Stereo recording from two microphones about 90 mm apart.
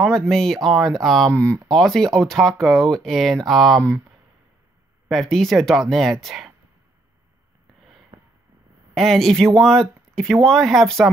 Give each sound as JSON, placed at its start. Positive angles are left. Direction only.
{"t": 0.0, "sound": "speech", "side_deg": 5}
{"t": 5.0, "sound": "speech", "side_deg": 0}
{"t": 8.1, "sound": "a sound", "side_deg": -80}
{"t": 8.9, "sound": "speech", "side_deg": 0}